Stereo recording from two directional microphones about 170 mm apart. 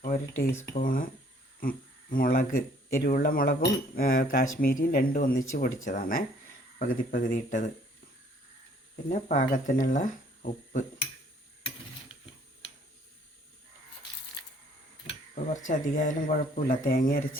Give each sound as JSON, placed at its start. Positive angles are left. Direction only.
{"t": 0.7, "sound": "speech", "side_deg": 55}
{"t": 9.0, "sound": "speech", "side_deg": 50}
{"t": 15.4, "sound": "speech", "side_deg": 50}